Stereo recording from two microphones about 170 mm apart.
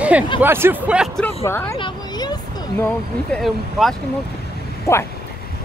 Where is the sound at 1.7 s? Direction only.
25° left (ahead or behind).